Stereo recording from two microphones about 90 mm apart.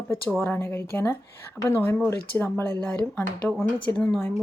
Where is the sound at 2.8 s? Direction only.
10° left (ahead or behind).